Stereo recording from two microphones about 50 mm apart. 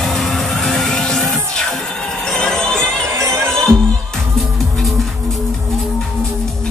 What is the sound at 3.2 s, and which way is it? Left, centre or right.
Music, right.